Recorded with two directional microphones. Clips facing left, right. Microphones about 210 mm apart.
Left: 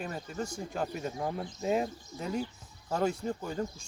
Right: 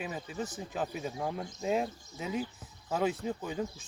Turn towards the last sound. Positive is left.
turn(degrees=-5)  # may be behind; listen again after turning